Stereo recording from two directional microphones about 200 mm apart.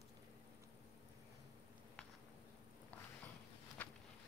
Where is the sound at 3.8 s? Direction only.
10° left (ahead or behind).